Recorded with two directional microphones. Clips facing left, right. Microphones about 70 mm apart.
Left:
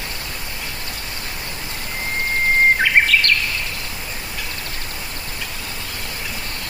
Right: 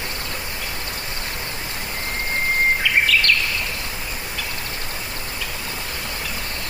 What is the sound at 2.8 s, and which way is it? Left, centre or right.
Bird vocalization, left.